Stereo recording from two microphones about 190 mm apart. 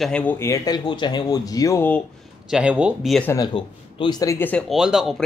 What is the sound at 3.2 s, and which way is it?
Speech, 20° left (ahead or behind).